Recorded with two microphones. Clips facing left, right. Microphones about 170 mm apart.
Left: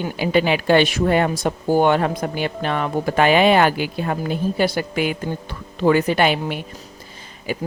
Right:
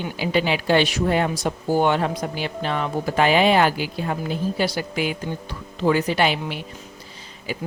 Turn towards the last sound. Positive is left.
turn(degrees=50)  # may be behind; listen again after turning